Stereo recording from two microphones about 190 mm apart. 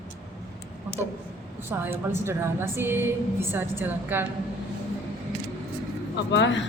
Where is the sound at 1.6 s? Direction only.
10° right (ahead or behind).